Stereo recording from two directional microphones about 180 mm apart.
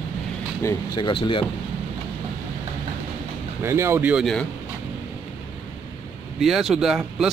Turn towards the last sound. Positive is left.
turn(degrees=-5)  # may be behind; listen again after turning